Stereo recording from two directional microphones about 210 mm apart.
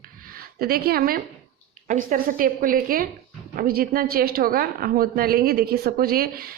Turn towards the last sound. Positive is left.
turn(degrees=-45)  # may be behind; listen again after turning